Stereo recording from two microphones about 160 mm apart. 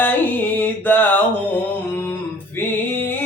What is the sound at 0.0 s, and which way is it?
Music, 10° left (ahead or behind).